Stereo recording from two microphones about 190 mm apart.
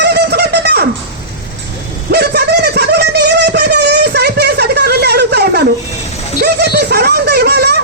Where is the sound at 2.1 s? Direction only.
55° right (ahead or behind).